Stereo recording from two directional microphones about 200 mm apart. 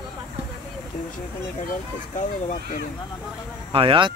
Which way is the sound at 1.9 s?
40° left (ahead or behind).